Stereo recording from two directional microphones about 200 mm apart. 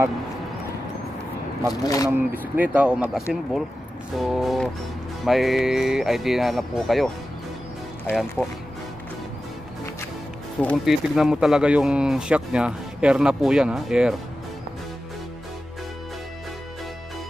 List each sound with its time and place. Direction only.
1.8 s speech: 15° left (ahead or behind)
2.0 s speech: 10° right (ahead or behind)
8.1 s speech: centre (ahead or behind)
10.6 s speech: centre (ahead or behind)